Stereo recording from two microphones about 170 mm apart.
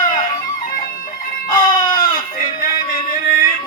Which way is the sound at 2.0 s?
55° left (ahead or behind).